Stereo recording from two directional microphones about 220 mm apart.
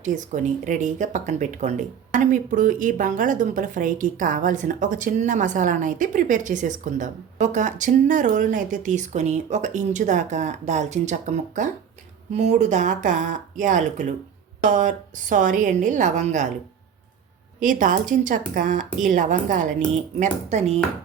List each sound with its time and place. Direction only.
0.0 s speech: 35° right (ahead or behind)
17.6 s speech: 35° right (ahead or behind)